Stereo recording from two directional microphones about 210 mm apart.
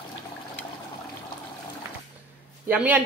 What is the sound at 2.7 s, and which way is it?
Speech, 10° right (ahead or behind).